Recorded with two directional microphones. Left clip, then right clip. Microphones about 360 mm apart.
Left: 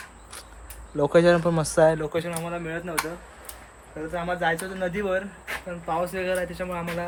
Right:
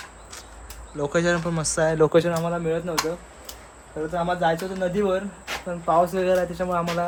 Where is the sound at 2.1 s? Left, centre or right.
Centre.